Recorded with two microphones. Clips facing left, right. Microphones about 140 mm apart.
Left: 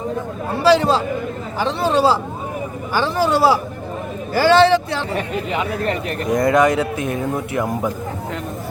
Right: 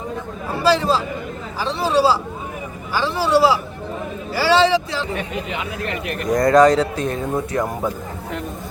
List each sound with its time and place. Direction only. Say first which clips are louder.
0.7 s a man's voice: left 4 dB; 65° left (ahead or behind)
5.1 s speech: left 4 dB; 35° left (ahead or behind)
6.3 s speech: right 2 dB; 20° left (ahead or behind)